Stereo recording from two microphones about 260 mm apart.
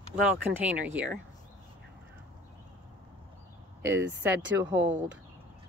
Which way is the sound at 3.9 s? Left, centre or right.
Centre.